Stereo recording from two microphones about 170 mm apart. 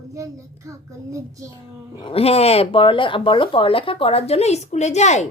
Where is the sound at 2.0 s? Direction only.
35° left (ahead or behind).